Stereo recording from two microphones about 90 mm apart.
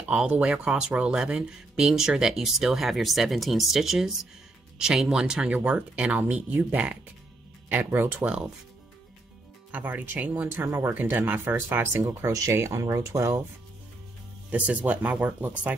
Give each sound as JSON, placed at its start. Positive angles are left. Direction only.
{"t": 0.1, "sound": "speech", "side_deg": -10}
{"t": 9.7, "sound": "speech", "side_deg": -15}
{"t": 14.5, "sound": "speech", "side_deg": -15}